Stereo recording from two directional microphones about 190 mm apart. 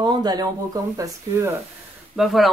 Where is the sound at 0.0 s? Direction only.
20° right (ahead or behind).